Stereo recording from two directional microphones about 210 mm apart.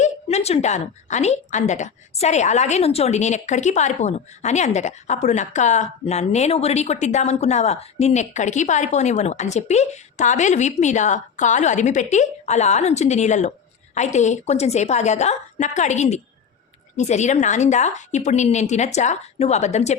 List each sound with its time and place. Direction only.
0.0 s a woman's voice: 30° left (ahead or behind)